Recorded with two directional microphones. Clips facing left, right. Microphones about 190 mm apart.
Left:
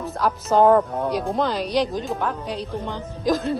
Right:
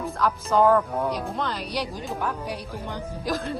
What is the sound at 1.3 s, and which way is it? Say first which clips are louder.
Speech: left 7 dB; 30° left (ahead or behind).